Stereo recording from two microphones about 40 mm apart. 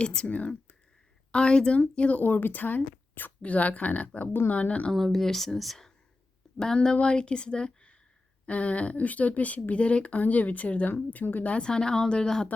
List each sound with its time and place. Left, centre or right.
0.0 s a woman's voice: left
0.3 s speech: left
1.3 s a woman's voice: left
1.7 s speech: left
3.4 s speech: left
4.9 s speech: centre
7.0 s a woman's voice: left
11.6 s a woman's voice: centre